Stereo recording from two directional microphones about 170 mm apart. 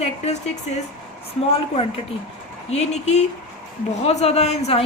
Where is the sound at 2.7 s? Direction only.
40° left (ahead or behind).